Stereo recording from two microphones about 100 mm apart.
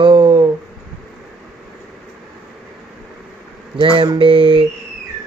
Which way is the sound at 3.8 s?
55° right (ahead or behind).